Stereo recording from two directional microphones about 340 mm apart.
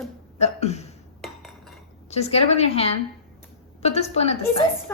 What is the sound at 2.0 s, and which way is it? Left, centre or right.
Speech, centre.